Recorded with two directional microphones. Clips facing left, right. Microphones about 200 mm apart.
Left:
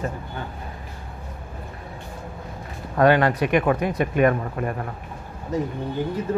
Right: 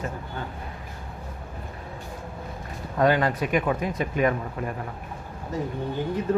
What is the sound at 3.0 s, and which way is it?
A man's voice, 70° left (ahead or behind).